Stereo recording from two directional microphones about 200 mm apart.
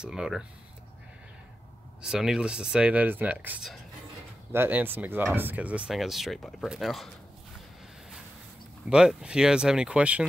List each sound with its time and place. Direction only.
0.0 s speech: 5° right (ahead or behind)
2.0 s speech: 5° right (ahead or behind)
8.8 s speech: 5° right (ahead or behind)